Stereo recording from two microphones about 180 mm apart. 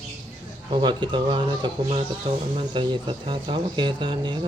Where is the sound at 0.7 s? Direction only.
25° right (ahead or behind).